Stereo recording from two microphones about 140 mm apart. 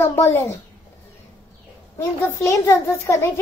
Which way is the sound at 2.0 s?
20° left (ahead or behind).